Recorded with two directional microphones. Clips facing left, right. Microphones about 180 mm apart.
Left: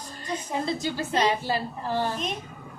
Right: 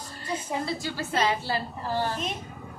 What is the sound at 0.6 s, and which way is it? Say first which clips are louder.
A woman's voice: left 3 dB; 20° left (ahead or behind).